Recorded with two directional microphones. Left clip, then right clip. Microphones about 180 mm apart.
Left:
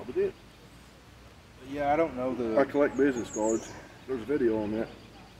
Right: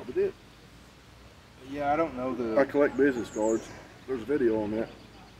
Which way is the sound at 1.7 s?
20° left (ahead or behind).